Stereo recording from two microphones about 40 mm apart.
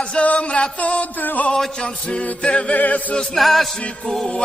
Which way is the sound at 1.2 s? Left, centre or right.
Left.